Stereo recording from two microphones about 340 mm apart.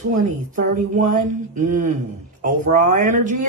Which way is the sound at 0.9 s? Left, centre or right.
Right.